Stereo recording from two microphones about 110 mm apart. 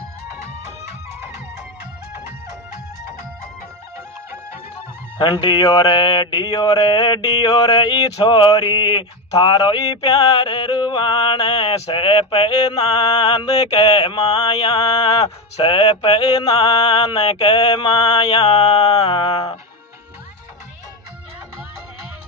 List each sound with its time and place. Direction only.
5.2 s mantra: 45° left (ahead or behind)
11.7 s mantra: 65° left (ahead or behind); by 15.3 s 35° left (ahead or behind)
15.6 s mantra: 50° left (ahead or behind)
19.3 s speech: 60° left (ahead or behind)